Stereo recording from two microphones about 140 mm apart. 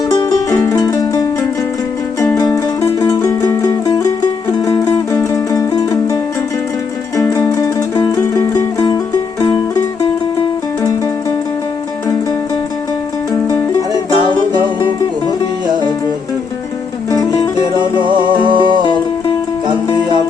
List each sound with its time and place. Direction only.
0.1 s music: 30° left (ahead or behind)
7.4 s music: 25° left (ahead or behind)
10.8 s music: 25° left (ahead or behind)
13.9 s music: 35° right (ahead or behind)
17.1 s music: 25° left (ahead or behind)
17.7 s music: 35° right (ahead or behind)